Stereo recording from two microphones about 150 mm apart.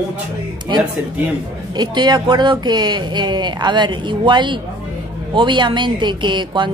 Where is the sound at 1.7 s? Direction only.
30° right (ahead or behind).